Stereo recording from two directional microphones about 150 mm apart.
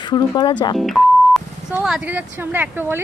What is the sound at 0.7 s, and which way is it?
A woman's voice, centre (ahead or behind).